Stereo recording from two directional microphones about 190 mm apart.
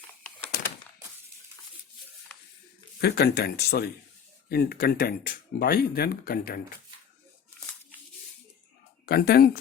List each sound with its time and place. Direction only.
3.0 s speech: 55° left (ahead or behind)
9.0 s speech: 55° left (ahead or behind)